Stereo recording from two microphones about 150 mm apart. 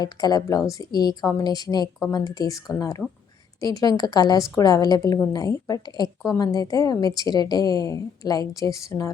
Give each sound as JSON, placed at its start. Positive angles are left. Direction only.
{"t": 0.0, "sound": "a woman's voice", "side_deg": 25}